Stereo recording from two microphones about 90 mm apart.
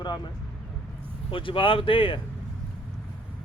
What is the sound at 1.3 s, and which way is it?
Speech, 70° left (ahead or behind).